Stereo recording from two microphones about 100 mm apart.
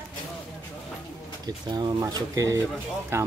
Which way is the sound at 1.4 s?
45° right (ahead or behind).